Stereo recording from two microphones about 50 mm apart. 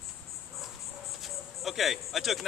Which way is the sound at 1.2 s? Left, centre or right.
Centre.